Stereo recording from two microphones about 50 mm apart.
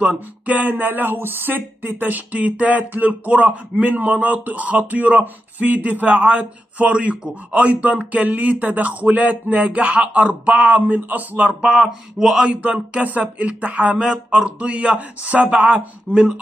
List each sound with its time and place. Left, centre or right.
0.0 s speech: right
11.6 s speech: centre
12.4 s speech: right
14.0 s speech: centre
14.6 s speech: right